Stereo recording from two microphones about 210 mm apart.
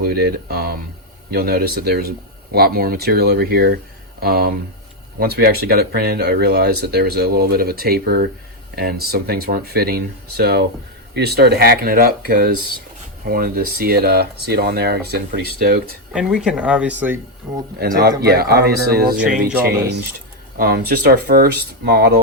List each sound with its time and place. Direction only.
0.0 s speech: 50° right (ahead or behind)
16.1 s speech: 5° right (ahead or behind)
17.7 s speech: 45° right (ahead or behind)